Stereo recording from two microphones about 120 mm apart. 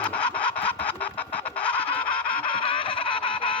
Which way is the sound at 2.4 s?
45° left (ahead or behind).